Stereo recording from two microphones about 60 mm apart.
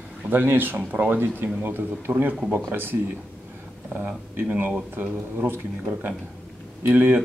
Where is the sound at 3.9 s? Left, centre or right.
Right.